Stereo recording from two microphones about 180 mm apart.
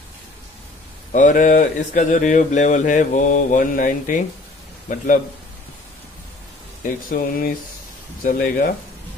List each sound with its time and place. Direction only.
1.1 s a man's voice: 45° left (ahead or behind)
7.1 s speech: 50° left (ahead or behind)